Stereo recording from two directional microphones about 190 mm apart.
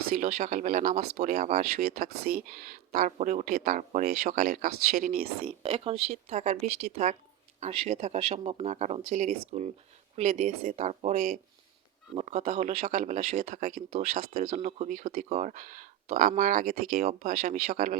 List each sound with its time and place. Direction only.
0.1 s speech: 40° right (ahead or behind)
1.9 s speech: 50° right (ahead or behind)
5.5 s speech: 30° right (ahead or behind); by 17.9 s 45° right (ahead or behind)